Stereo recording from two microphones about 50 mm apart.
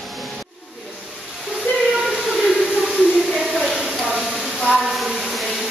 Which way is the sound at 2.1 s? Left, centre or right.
Centre.